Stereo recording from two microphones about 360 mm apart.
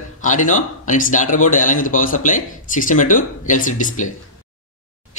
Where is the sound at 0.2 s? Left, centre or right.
Left.